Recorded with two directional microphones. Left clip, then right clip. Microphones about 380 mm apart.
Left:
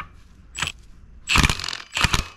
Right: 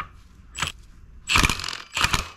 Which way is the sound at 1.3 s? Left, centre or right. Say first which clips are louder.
Left 1 dB; centre.